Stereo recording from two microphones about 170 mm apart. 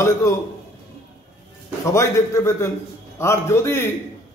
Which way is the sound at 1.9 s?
15° left (ahead or behind).